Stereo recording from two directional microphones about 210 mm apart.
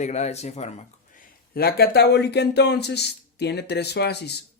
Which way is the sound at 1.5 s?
50° left (ahead or behind).